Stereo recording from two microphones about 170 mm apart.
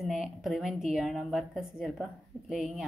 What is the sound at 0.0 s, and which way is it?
A woman's voice, centre (ahead or behind).